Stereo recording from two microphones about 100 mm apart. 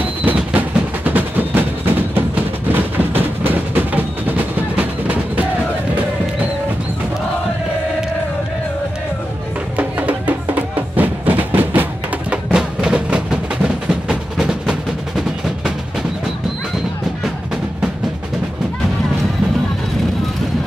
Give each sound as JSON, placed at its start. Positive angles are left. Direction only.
{"t": 0.0, "sound": "percussion", "side_deg": -15}
{"t": 2.7, "sound": "music", "side_deg": -20}
{"t": 9.8, "sound": "music", "side_deg": -15}
{"t": 13.8, "sound": "percussion", "side_deg": -5}